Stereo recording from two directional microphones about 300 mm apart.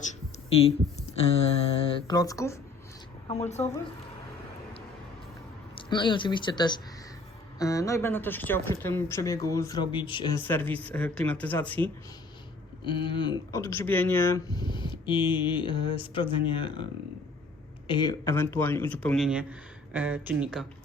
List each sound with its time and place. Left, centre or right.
1.7 s speech: centre
3.2 s speech: left
5.7 s speech: centre